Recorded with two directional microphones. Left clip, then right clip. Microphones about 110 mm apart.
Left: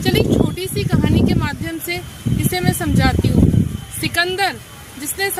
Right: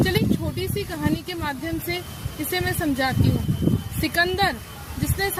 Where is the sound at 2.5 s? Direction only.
5° left (ahead or behind).